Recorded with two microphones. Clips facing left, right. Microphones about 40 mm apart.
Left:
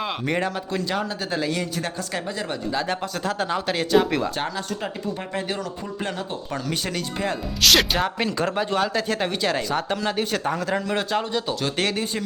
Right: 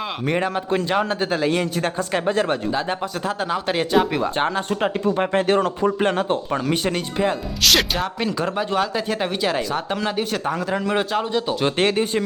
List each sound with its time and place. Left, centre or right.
0.3 s speech: centre
0.9 s speech: right
2.7 s speech: centre
4.4 s speech: right
6.5 s speech: right
7.6 s speech: centre
11.6 s speech: right